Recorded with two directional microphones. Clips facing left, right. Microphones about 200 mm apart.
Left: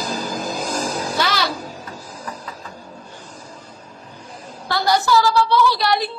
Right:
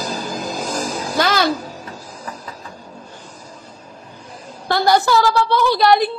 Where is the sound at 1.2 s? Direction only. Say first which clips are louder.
Right 6 dB; 50° right (ahead or behind).